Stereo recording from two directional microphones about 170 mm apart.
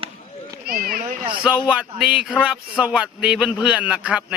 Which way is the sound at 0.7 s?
60° right (ahead or behind).